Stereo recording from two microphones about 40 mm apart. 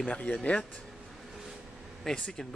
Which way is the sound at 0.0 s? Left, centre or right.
Left.